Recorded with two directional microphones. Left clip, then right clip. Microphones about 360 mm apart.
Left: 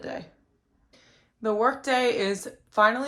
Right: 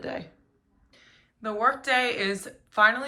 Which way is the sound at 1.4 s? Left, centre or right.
Centre.